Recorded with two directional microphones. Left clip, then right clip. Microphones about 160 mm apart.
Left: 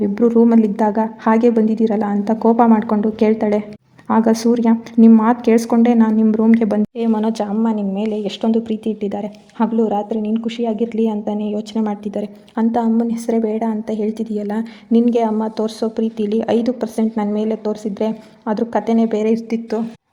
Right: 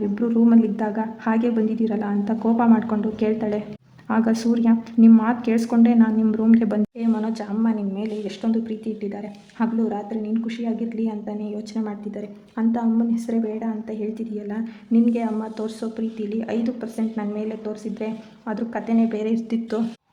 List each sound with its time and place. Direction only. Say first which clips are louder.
0.1 s a woman's voice: left 6 dB; 35° left (ahead or behind)
6.9 s a woman's voice: left 7 dB; 40° left (ahead or behind); by 19.8 s 20° left (ahead or behind)